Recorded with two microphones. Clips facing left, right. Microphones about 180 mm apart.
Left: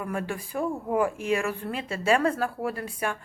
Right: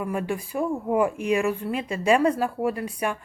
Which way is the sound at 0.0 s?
15° right (ahead or behind).